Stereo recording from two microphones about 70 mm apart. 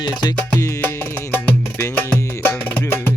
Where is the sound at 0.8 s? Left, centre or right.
Left.